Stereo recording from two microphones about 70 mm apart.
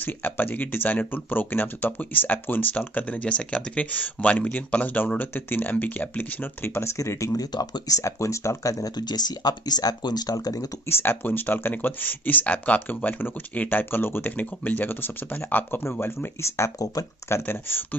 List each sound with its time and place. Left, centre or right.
0.0 s speech: left
7.5 s speech: left
8.0 s speech: left
10.9 s speech: left
17.3 s speech: left